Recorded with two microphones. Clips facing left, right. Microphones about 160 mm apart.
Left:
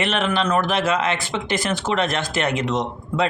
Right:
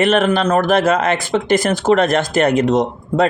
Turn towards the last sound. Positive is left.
turn(degrees=-45)  # may be behind; listen again after turning